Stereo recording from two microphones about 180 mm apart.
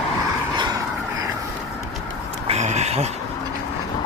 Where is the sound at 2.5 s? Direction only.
40° right (ahead or behind).